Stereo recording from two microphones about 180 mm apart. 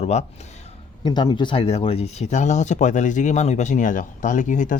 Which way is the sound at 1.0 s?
25° left (ahead or behind).